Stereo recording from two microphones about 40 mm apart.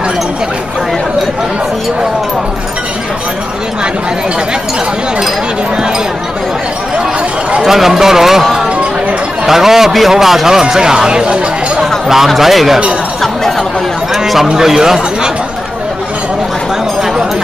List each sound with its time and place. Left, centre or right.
7.6 s a man's voice: centre
12.3 s speech: centre
14.1 s a man's voice: centre